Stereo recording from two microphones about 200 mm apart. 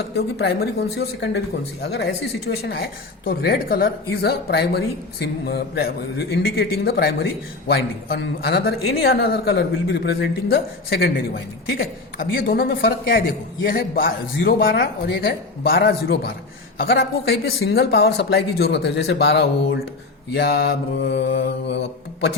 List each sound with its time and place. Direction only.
0.2 s mantra: 50° left (ahead or behind)
2.6 s speech: 50° left (ahead or behind)
20.3 s mantra: 50° left (ahead or behind)